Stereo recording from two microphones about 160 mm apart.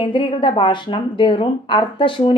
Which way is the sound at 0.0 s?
30° left (ahead or behind).